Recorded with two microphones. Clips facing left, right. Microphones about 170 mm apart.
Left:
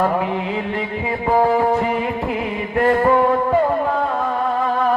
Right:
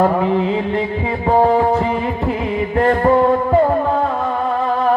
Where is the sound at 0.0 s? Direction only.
30° right (ahead or behind).